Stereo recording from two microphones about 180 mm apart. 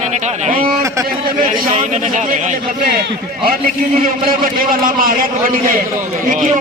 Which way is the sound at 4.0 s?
50° right (ahead or behind).